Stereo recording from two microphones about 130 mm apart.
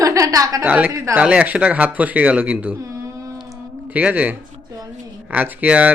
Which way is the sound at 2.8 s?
25° right (ahead or behind).